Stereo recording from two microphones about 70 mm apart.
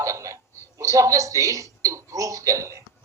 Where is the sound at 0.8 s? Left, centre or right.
Right.